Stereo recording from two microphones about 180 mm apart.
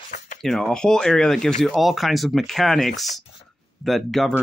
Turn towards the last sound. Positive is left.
turn(degrees=0)  # may be behind; listen again after turning